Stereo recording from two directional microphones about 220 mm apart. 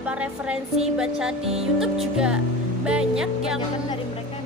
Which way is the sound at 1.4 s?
25° right (ahead or behind).